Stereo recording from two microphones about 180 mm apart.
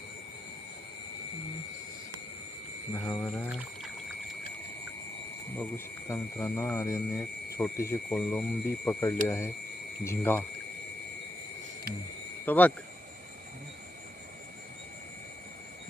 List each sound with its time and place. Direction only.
2.9 s speech: 15° left (ahead or behind)
5.5 s speech: 15° left (ahead or behind)
8.1 s speech: 5° left (ahead or behind)
12.5 s speech: 10° left (ahead or behind)